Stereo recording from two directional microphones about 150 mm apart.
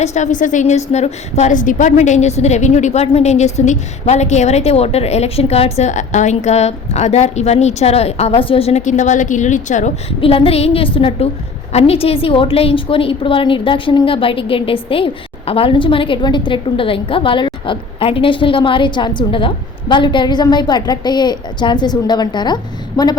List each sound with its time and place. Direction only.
0.0 s a woman's voice: 50° left (ahead or behind)
10.1 s a woman's voice: 40° left (ahead or behind)